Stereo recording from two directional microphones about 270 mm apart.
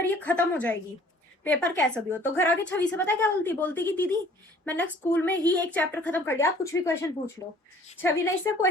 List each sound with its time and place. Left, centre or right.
0.0 s a woman's voice: centre